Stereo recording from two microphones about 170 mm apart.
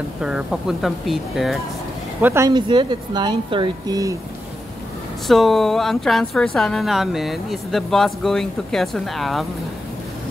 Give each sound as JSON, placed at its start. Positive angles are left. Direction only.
{"t": 0.2, "sound": "speech", "side_deg": -5}
{"t": 2.2, "sound": "speech", "side_deg": -20}
{"t": 5.2, "sound": "speech", "side_deg": 0}